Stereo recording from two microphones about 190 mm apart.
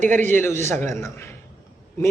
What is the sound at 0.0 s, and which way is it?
Speech, 40° right (ahead or behind).